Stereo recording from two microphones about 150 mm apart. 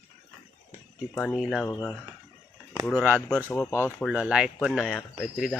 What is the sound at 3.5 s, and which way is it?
Speech, 15° left (ahead or behind).